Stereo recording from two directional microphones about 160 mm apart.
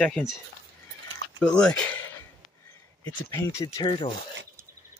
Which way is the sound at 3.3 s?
20° left (ahead or behind).